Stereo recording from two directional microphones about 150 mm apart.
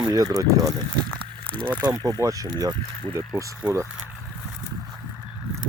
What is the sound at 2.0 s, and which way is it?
Speech, 25° right (ahead or behind).